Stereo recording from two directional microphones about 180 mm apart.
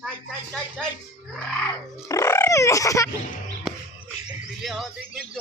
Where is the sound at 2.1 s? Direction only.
15° left (ahead or behind).